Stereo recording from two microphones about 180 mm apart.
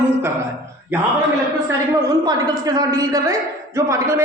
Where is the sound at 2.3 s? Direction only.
20° right (ahead or behind).